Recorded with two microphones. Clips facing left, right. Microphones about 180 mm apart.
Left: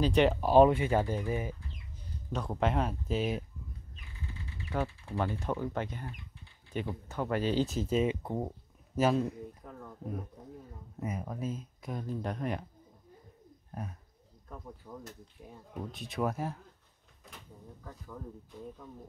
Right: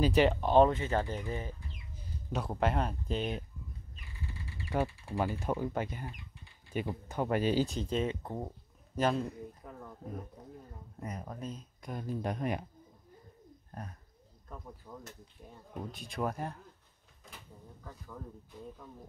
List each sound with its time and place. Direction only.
0.0 s speech: 5° right (ahead or behind)
2.3 s speech: 5° right (ahead or behind)
4.6 s speech: 10° right (ahead or behind)
7.6 s speech: 5° left (ahead or behind)
11.0 s speech: 5° left (ahead or behind); by 12.6 s 15° right (ahead or behind)
14.8 s speech: centre (ahead or behind)
17.8 s speech: centre (ahead or behind)